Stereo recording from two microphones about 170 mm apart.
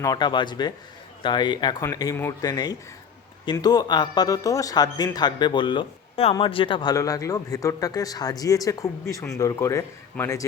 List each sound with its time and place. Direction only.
0.0 s speech: 25° left (ahead or behind)